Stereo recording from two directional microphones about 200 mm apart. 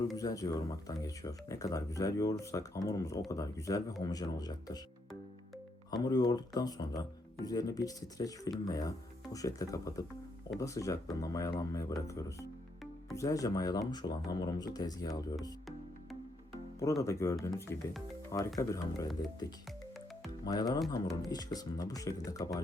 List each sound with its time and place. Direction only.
0.2 s speech: 20° left (ahead or behind)
5.9 s speech: 20° left (ahead or behind)
17.0 s speech: 15° left (ahead or behind)
20.4 s speech: 20° left (ahead or behind)